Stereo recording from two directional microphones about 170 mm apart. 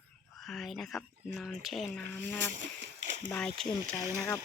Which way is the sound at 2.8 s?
90° right.